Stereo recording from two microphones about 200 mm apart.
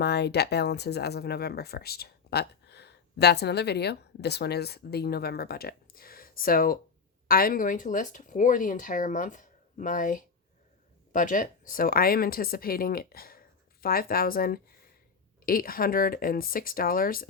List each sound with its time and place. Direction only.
0.0 s speech: 55° left (ahead or behind)